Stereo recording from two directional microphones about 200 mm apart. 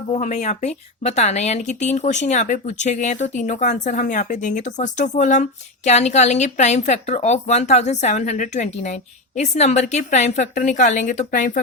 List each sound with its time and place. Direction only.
0.1 s speech: 35° left (ahead or behind)